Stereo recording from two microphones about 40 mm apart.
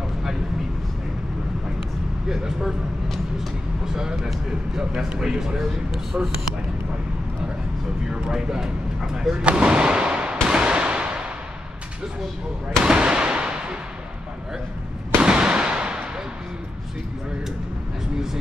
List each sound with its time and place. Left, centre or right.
2.2 s speech: centre
3.8 s speech: centre
6.1 s speech: right
8.1 s speech: centre
10.5 s gunshot: right
12.8 s a sound: right
15.2 s fireworks: right